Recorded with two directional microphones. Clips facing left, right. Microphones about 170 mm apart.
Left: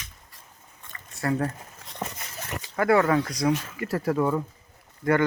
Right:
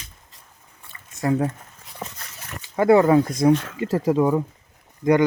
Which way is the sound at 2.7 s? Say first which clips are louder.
Right 6 dB; 20° right (ahead or behind).